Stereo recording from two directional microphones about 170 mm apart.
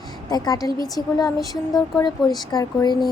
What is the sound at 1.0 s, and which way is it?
Speech, 25° right (ahead or behind).